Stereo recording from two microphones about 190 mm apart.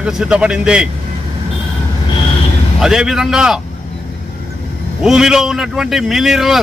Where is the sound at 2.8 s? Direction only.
5° right (ahead or behind).